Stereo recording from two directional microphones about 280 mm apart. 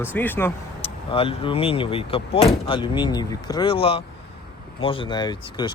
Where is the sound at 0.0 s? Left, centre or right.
Centre.